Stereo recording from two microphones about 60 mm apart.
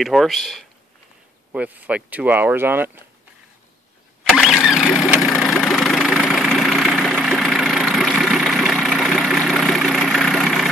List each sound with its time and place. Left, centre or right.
0.0 s speech: centre
1.5 s speech: right
4.2 s engine starting: centre
4.6 s vehicle: centre